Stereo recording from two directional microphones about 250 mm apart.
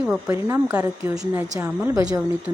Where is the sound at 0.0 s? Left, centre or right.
Centre.